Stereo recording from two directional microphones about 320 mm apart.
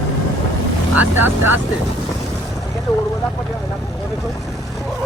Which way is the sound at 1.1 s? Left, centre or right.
Centre.